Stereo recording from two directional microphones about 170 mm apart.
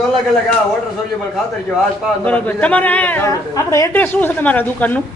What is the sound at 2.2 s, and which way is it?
A woman's voice, 10° left (ahead or behind).